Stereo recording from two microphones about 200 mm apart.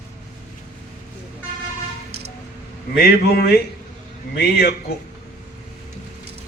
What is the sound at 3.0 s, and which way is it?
A man's voice, 50° left (ahead or behind).